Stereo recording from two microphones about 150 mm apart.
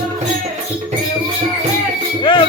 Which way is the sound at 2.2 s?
35° left (ahead or behind).